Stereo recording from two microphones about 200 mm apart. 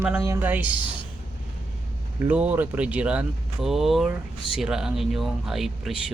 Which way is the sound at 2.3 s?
5° right (ahead or behind).